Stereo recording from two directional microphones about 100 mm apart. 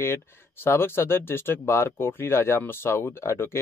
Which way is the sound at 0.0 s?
25° left (ahead or behind).